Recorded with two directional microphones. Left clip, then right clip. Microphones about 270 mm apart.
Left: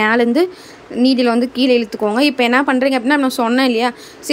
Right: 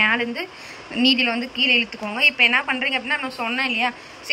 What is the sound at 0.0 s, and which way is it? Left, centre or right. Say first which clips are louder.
Speech: left 7 dB; left.